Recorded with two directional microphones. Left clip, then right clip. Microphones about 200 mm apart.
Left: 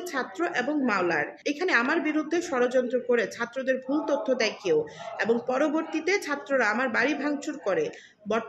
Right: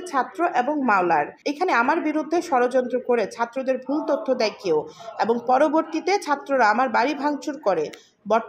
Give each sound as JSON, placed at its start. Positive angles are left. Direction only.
{"t": 0.1, "sound": "a woman's voice", "side_deg": -15}